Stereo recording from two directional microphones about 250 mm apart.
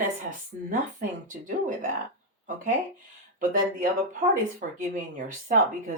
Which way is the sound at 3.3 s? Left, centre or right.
Right.